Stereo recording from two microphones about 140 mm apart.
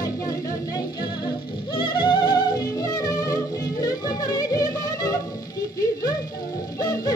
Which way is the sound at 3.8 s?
25° left (ahead or behind).